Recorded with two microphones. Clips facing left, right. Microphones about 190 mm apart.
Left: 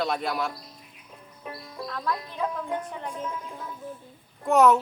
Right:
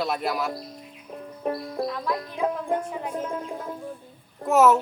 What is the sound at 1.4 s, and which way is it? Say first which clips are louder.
Music: right 11 dB; 50° right (ahead or behind).